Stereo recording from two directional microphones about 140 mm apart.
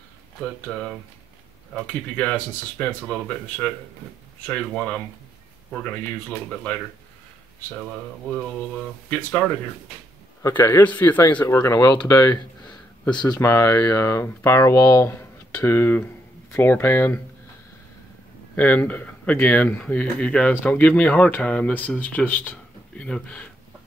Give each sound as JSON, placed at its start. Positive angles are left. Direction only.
{"t": 0.7, "sound": "speech", "side_deg": 0}
{"t": 9.1, "sound": "speech", "side_deg": 10}
{"t": 18.6, "sound": "speech", "side_deg": 10}